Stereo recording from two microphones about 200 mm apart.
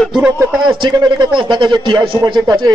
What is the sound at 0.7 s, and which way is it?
Speech, 25° right (ahead or behind).